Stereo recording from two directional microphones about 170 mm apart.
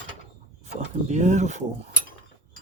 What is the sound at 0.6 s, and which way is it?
Speech, 45° right (ahead or behind).